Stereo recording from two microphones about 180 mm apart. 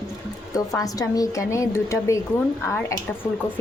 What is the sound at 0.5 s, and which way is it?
A woman's voice, 20° left (ahead or behind).